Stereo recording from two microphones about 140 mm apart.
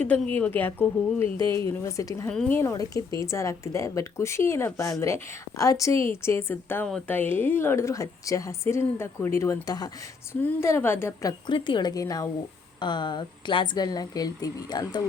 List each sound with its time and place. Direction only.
0.0 s a woman's voice: 10° left (ahead or behind)
1.2 s speech: 35° right (ahead or behind)
1.5 s a woman's voice: 20° left (ahead or behind)
2.2 s speech: 5° left (ahead or behind)
2.5 s a woman's voice: 20° left (ahead or behind)
11.3 s a woman's voice: 35° left (ahead or behind)